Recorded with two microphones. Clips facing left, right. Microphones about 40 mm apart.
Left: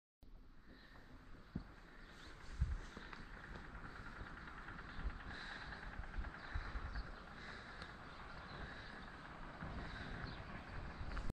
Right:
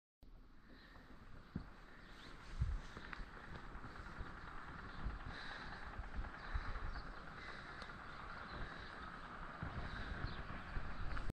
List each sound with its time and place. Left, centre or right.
1.5 s a sound: centre
2.8 s fireworks: centre
3.3 s vehicle: centre